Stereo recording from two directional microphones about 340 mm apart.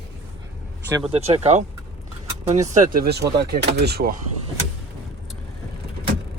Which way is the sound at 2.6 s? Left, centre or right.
Right.